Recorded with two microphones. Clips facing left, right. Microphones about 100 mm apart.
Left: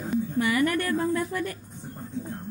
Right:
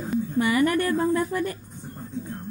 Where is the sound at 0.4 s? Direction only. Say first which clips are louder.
Right 4 dB; 25° right (ahead or behind).